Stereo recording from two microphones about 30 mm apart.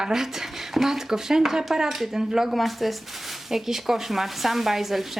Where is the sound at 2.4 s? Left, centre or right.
Centre.